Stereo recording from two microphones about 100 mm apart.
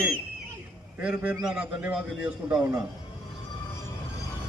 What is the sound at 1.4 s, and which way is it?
A man's voice, 10° right (ahead or behind).